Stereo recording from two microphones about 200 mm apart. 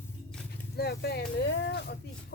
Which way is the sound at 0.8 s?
55° left (ahead or behind).